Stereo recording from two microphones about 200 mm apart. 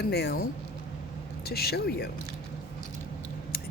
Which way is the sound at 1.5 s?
50° left (ahead or behind).